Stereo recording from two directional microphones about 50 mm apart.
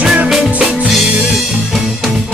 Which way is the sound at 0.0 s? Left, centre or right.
Right.